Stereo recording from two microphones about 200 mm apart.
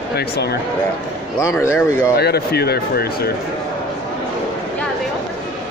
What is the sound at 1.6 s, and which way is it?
Speech, 15° left (ahead or behind).